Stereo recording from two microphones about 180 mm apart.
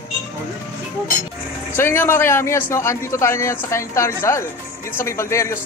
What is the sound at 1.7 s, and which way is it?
A man's voice, 10° left (ahead or behind).